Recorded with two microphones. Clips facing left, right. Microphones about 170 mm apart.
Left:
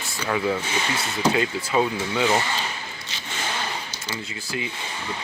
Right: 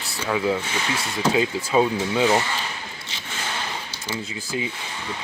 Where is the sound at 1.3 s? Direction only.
15° right (ahead or behind).